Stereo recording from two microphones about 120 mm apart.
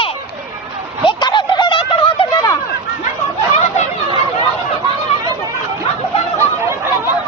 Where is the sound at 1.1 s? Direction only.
40° left (ahead or behind).